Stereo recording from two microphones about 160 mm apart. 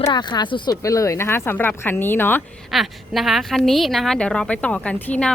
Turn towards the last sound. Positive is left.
turn(degrees=5)  # may be behind; listen again after turning